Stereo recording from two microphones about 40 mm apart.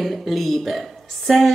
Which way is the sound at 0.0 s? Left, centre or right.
Centre.